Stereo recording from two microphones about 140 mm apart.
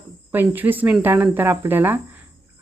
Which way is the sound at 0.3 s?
15° right (ahead or behind).